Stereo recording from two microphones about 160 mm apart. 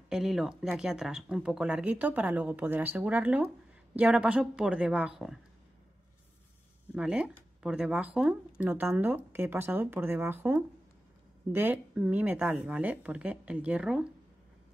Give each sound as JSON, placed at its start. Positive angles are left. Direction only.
{"t": 0.1, "sound": "speech", "side_deg": -5}
{"t": 6.9, "sound": "speech", "side_deg": -5}